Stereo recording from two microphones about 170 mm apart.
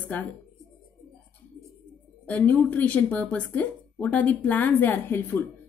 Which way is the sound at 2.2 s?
10° left (ahead or behind).